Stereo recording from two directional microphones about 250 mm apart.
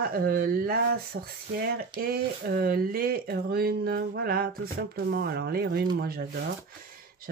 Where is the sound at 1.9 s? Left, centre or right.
Right.